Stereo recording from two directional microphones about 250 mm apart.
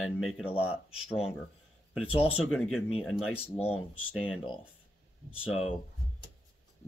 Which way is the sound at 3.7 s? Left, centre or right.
Centre.